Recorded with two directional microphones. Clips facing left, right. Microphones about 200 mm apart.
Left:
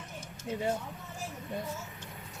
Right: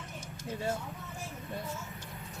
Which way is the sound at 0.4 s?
15° left (ahead or behind).